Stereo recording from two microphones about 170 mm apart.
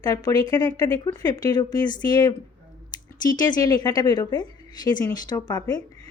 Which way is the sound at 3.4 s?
20° left (ahead or behind).